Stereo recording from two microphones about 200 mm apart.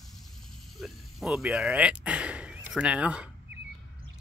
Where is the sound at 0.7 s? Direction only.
Centre (ahead or behind).